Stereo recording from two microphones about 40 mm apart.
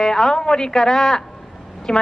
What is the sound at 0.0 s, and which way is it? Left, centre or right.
A woman's voice, centre.